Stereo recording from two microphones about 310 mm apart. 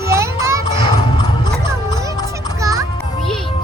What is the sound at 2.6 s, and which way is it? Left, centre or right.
Music, centre.